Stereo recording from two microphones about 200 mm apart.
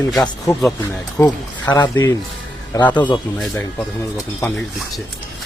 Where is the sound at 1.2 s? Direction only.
15° left (ahead or behind).